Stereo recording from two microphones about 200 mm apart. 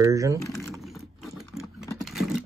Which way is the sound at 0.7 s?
Centre (ahead or behind).